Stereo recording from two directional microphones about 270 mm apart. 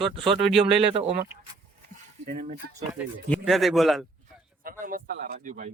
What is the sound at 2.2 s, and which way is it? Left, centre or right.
Speech, right.